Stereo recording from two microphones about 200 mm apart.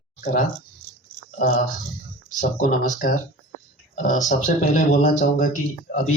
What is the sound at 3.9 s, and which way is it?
A man's voice, 40° left (ahead or behind).